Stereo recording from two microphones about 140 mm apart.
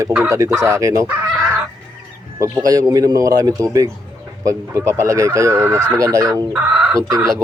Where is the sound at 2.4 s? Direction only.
25° right (ahead or behind).